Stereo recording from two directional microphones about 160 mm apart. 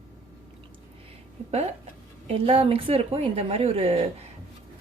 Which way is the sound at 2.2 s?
35° right (ahead or behind).